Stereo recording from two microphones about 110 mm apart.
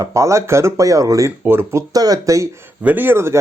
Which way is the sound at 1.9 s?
35° right (ahead or behind).